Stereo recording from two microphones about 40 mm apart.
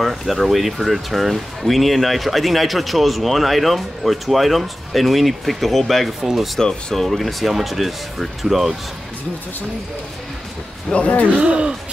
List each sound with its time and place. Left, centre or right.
0.0 s speech: centre
11.0 s speech: left
11.3 s speech: right